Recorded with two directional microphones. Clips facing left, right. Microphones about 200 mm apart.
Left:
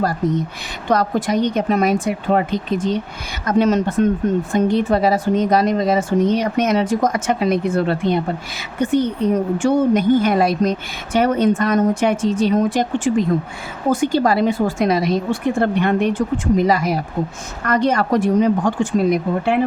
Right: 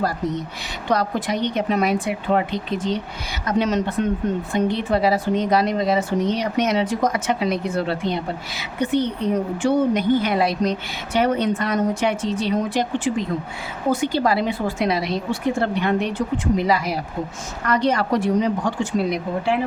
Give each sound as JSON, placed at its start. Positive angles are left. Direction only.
{"t": 0.9, "sound": "speech", "side_deg": 45}